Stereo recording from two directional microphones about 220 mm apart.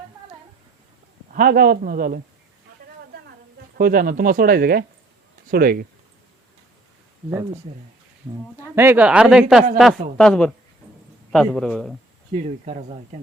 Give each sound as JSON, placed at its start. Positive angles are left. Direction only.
{"t": 1.3, "sound": "speech", "side_deg": -40}
{"t": 3.8, "sound": "speech", "side_deg": -40}
{"t": 7.3, "sound": "speech", "side_deg": -15}
{"t": 8.7, "sound": "speech", "side_deg": -10}
{"t": 12.3, "sound": "speech", "side_deg": -30}